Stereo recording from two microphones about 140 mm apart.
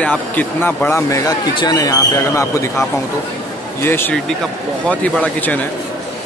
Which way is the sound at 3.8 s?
15° left (ahead or behind).